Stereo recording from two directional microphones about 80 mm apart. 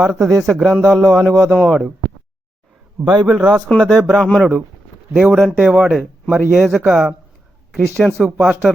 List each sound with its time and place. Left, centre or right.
0.0 s a man's voice: centre
3.0 s a man's voice: right
3.2 s a man's voice: centre
3.7 s a man's voice: centre
5.1 s a man's voice: centre
5.5 s speech: right
5.8 s a man's voice: centre